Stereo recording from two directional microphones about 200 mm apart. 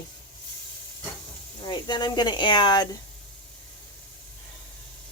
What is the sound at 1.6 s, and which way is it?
Speech, 20° left (ahead or behind).